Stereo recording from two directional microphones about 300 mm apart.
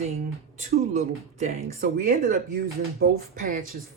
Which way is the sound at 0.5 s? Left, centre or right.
Right.